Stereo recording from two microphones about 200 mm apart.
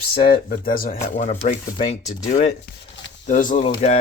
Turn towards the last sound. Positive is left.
turn(degrees=35)  # may be behind; listen again after turning